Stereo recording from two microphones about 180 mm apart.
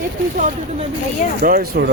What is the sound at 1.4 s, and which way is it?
Speech, 55° right (ahead or behind).